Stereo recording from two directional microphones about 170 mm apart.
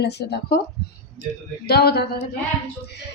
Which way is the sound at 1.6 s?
70° left (ahead or behind).